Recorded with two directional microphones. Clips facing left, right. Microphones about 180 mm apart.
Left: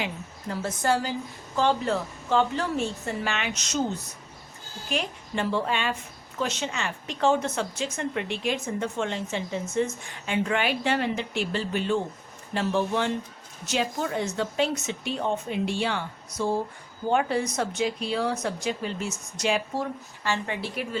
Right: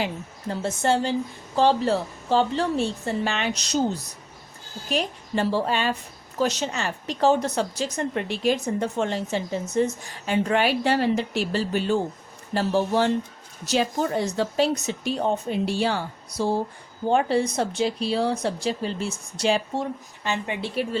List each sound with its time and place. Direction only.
0.0 s a woman's voice: 30° right (ahead or behind)